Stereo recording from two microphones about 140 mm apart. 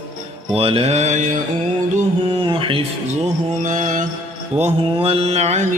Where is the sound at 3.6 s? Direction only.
65° right (ahead or behind).